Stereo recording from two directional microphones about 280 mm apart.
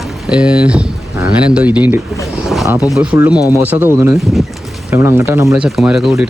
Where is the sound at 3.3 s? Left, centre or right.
Centre.